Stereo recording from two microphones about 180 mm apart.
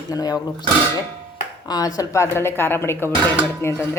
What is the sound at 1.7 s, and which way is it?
Speech, 20° left (ahead or behind).